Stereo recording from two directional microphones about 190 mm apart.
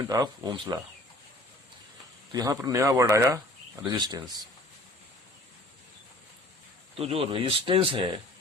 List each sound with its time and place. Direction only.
0.0 s speech: 20° right (ahead or behind)
2.3 s speech: 20° right (ahead or behind)
7.0 s speech: 30° right (ahead or behind)